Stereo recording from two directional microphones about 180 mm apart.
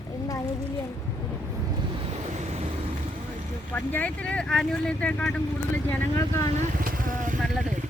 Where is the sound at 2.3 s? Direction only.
40° right (ahead or behind).